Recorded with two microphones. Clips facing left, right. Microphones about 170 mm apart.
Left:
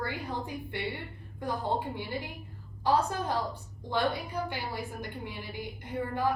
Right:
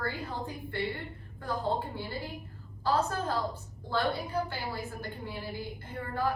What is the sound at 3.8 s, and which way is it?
A woman's voice, 15° left (ahead or behind).